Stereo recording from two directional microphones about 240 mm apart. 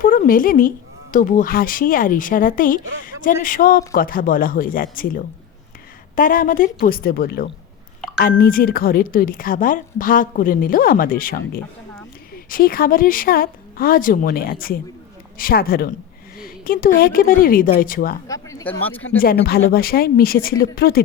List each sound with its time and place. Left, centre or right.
0.0 s a woman's voice: left
18.4 s speech: centre
19.2 s a woman's voice: left